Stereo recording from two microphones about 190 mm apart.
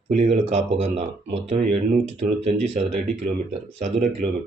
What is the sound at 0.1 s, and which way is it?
Speech, 35° right (ahead or behind).